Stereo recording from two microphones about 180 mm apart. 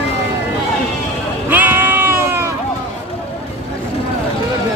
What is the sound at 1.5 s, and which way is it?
Sheep, 10° right (ahead or behind).